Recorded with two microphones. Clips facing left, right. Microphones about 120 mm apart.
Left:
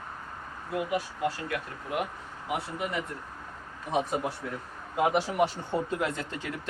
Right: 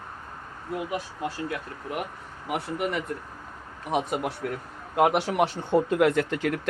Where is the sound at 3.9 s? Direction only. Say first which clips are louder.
Right 2 dB; 75° right (ahead or behind).